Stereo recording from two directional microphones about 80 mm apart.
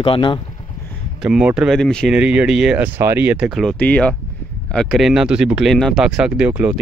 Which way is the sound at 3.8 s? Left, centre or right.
Centre.